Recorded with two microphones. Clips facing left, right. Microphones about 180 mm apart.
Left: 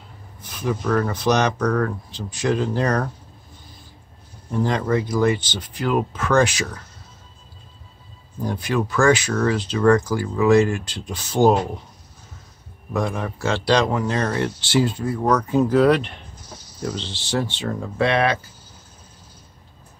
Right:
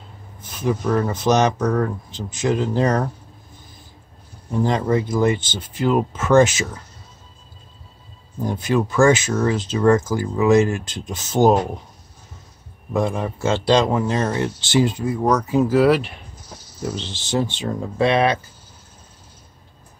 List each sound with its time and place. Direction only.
0.5 s a man's voice: 15° right (ahead or behind)
4.5 s a man's voice: 20° right (ahead or behind)
8.4 s a man's voice: 20° right (ahead or behind)
12.9 s a man's voice: 25° right (ahead or behind)